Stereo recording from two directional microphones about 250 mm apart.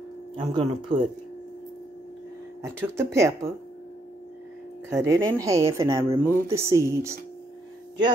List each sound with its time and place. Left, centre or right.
0.4 s speech: centre
2.8 s speech: centre
4.9 s speech: centre